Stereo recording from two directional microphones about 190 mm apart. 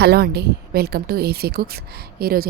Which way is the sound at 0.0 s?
55° right (ahead or behind).